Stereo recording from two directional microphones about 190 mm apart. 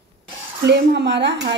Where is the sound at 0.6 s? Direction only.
65° right (ahead or behind).